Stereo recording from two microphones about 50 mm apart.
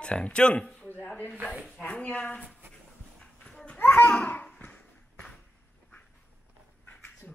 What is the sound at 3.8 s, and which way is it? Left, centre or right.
Babbling, left.